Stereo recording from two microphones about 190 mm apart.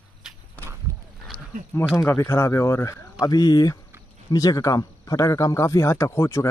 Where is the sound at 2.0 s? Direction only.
15° left (ahead or behind).